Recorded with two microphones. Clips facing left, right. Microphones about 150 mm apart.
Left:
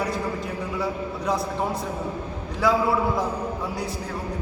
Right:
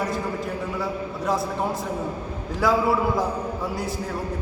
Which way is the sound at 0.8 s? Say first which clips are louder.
Even; centre (ahead or behind).